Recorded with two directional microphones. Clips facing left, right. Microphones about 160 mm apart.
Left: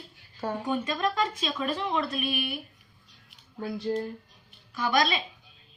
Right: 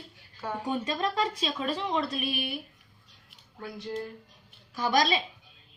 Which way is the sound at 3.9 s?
35° left (ahead or behind).